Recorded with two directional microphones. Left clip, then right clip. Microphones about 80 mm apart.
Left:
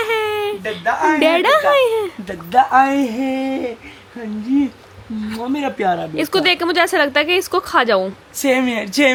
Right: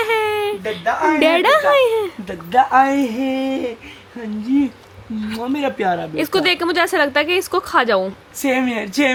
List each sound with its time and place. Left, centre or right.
0.0 s a sound: centre
0.9 s speech: centre
1.2 s speech: centre
2.2 s speech: centre
8.4 s speech: left